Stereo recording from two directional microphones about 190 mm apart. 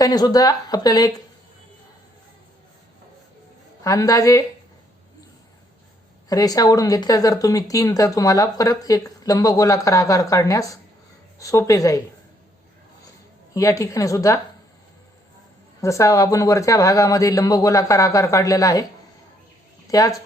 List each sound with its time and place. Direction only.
0.0 s speech: 20° left (ahead or behind)
3.8 s speech: 20° left (ahead or behind)
6.2 s speech: 20° left (ahead or behind)
13.5 s speech: 15° left (ahead or behind)
15.8 s speech: 15° left (ahead or behind)
19.9 s speech: 20° left (ahead or behind)